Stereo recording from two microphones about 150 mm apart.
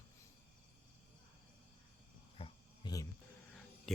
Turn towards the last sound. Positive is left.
turn(degrees=0)  # may be behind; listen again after turning